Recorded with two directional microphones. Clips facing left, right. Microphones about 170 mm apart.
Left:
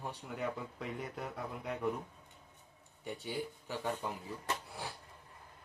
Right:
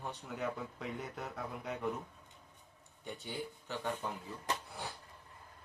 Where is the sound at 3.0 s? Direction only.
10° left (ahead or behind).